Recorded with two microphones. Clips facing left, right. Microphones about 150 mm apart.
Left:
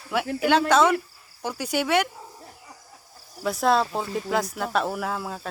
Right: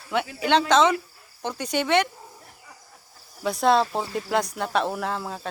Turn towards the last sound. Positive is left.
turn(degrees=0)  # may be behind; listen again after turning